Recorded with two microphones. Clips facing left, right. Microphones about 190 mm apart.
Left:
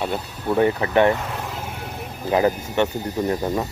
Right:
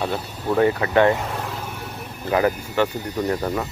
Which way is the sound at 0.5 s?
20° left (ahead or behind).